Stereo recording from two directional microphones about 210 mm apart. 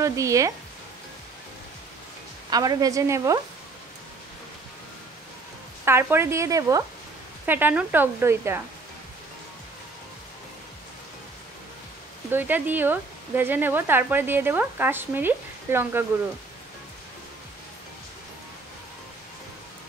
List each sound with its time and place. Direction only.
0.0 s speech: 15° right (ahead or behind)
2.5 s speech: 20° right (ahead or behind)
5.9 s speech: 10° right (ahead or behind)
12.3 s speech: 10° right (ahead or behind)